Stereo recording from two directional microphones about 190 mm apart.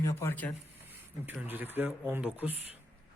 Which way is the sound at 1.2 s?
10° right (ahead or behind).